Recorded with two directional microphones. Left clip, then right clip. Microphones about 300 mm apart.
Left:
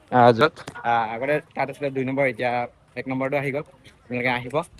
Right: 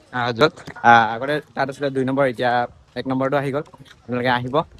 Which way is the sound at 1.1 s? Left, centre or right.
Centre.